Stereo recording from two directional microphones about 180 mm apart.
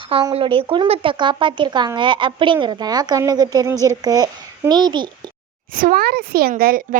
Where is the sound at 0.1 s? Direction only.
30° right (ahead or behind).